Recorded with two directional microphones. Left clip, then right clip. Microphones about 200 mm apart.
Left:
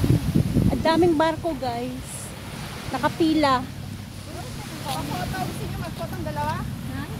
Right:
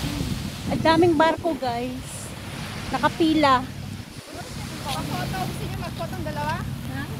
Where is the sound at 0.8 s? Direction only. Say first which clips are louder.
Right 2 dB; 5° right (ahead or behind).